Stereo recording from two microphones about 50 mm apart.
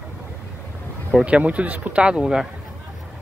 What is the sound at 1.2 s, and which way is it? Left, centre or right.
Speech, right.